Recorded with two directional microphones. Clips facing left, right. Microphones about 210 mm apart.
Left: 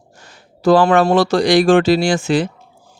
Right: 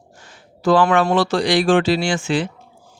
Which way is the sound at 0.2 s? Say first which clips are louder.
Left 4 dB; 40° left (ahead or behind).